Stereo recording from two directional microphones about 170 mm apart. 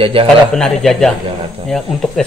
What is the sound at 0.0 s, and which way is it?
Speech, 30° right (ahead or behind).